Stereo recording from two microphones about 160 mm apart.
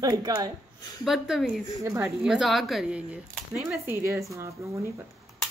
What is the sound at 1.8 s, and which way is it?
Speech, 15° right (ahead or behind).